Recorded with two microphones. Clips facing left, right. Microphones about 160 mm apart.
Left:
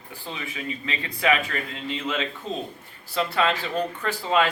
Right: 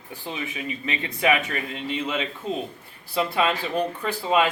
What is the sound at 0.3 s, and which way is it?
Speech, 20° right (ahead or behind).